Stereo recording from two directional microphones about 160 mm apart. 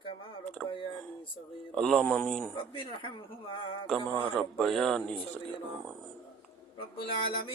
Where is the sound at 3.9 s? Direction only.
35° right (ahead or behind).